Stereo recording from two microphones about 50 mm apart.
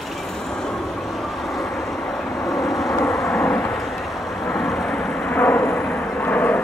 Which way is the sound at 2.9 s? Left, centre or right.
Left.